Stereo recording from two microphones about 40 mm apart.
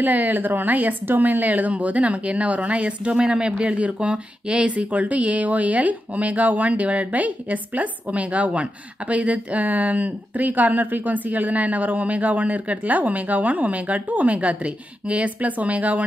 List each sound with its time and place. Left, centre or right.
0.0 s speech: right